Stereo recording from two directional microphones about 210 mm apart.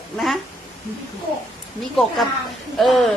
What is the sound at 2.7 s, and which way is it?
Speech, centre (ahead or behind).